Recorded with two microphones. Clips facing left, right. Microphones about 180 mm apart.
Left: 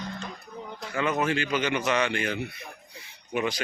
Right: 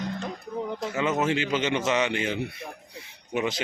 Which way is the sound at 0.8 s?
25° right (ahead or behind).